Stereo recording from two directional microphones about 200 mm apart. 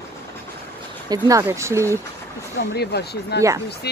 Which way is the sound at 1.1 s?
15° right (ahead or behind).